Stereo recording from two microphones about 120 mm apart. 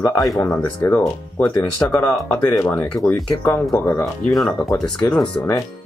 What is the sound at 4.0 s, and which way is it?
Speech, centre (ahead or behind).